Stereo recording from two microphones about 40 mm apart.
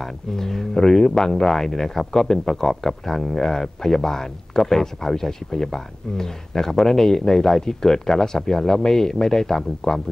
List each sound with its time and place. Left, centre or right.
0.0 s speech: centre